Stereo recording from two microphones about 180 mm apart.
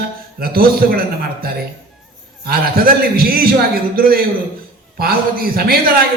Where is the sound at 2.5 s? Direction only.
55° right (ahead or behind).